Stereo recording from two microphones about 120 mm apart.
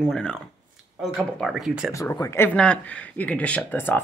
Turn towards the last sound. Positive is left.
turn(degrees=15)  # may be behind; listen again after turning